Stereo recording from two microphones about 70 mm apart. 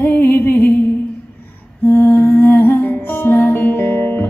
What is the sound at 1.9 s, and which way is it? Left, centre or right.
Music, left.